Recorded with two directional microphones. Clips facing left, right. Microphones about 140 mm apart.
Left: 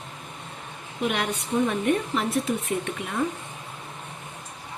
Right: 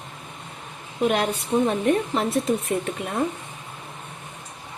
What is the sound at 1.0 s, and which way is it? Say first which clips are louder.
Speech: right 5 dB; 40° right (ahead or behind).